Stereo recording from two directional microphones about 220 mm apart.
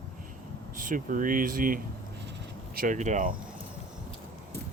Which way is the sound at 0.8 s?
35° right (ahead or behind).